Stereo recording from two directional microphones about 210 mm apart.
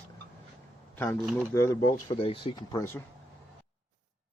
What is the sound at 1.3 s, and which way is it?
Speech, 15° left (ahead or behind).